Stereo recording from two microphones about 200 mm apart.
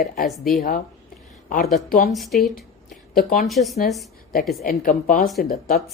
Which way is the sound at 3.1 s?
45° left (ahead or behind).